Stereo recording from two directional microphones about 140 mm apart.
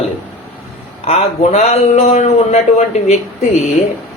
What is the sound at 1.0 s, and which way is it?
Speech, 45° left (ahead or behind).